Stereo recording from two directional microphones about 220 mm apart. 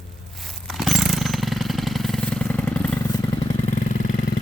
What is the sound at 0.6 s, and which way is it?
Vehicle, centre (ahead or behind).